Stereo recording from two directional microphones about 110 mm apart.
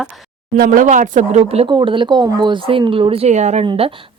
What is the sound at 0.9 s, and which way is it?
Speech, 80° right.